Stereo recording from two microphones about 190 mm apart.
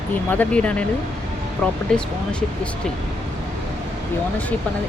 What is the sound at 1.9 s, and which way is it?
Speech, 5° left (ahead or behind).